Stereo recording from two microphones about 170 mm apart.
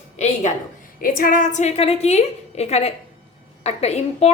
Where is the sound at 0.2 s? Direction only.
40° left (ahead or behind).